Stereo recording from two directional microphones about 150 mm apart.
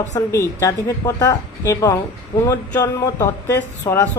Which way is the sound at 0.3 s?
20° left (ahead or behind).